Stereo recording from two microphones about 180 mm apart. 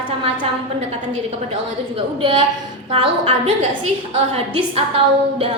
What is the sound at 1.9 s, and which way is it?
A woman's voice, 30° right (ahead or behind).